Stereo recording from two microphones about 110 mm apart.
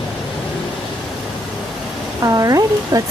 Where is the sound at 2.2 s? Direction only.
30° right (ahead or behind).